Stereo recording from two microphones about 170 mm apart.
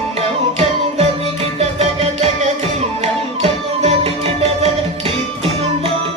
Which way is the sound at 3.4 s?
40° right (ahead or behind).